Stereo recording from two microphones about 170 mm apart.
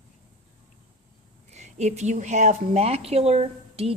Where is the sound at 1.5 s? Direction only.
45° right (ahead or behind).